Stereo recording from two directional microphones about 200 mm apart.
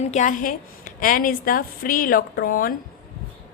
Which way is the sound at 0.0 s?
35° left (ahead or behind).